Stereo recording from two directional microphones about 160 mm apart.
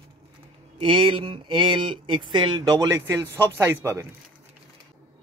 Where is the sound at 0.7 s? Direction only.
35° right (ahead or behind); by 4.1 s 15° right (ahead or behind).